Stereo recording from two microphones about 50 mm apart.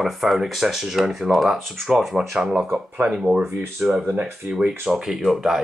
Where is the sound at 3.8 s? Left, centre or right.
Right.